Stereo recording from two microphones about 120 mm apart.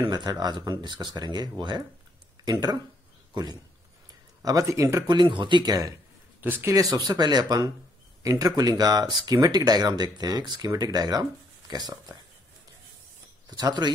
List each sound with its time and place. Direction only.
0.0 s speech: 35° right (ahead or behind)
4.4 s speech: 30° right (ahead or behind)
5.0 s speech: 40° right (ahead or behind)
6.4 s speech: 15° right (ahead or behind)
6.7 s speech: 30° right (ahead or behind)
13.5 s speech: 35° right (ahead or behind)